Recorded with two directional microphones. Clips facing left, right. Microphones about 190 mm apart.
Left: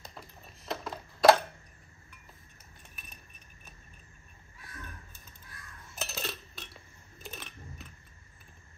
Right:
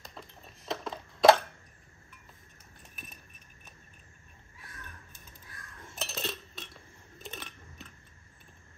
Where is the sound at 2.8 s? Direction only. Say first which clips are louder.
Right 4 dB; centre (ahead or behind).